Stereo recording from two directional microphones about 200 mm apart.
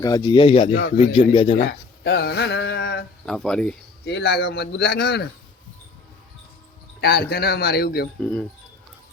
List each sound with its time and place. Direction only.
0.0 s speech: 15° left (ahead or behind)
0.7 s a man's voice: 65° left (ahead or behind)
0.9 s speech: 30° left (ahead or behind)
2.0 s a sound: 60° left (ahead or behind)
3.2 s speech: 5° left (ahead or behind)
4.0 s a man's voice: 55° left (ahead or behind)
7.0 s a man's voice: 50° left (ahead or behind)
8.2 s speech: 5° left (ahead or behind)